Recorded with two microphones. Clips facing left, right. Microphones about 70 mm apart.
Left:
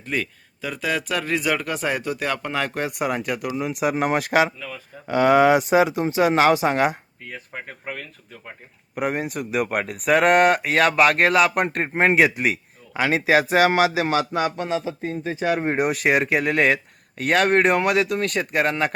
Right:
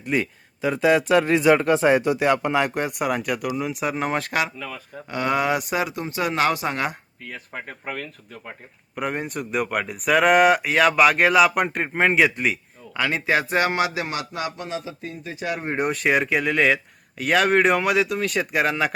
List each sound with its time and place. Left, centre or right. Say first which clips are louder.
0.0 s speech: right 3 dB; centre
3.0 s speech: even; centre
4.3 s speech: left 5 dB; left
7.3 s speech: even; centre
13.0 s speech: left 3 dB; centre
15.7 s speech: right 3 dB; centre